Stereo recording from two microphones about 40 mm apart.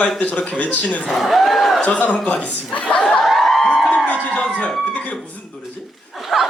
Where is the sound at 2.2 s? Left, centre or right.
Left.